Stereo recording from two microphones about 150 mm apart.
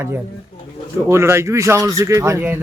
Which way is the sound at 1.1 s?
20° right (ahead or behind).